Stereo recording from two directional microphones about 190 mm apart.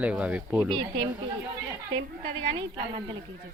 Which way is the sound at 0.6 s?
25° right (ahead or behind).